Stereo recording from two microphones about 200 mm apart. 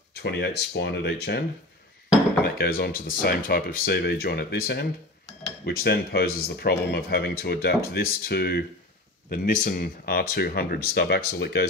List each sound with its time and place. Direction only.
0.1 s speech: 55° left (ahead or behind)
2.4 s speech: 50° left (ahead or behind)